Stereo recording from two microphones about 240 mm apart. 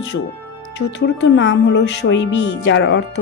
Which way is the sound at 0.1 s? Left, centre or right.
Left.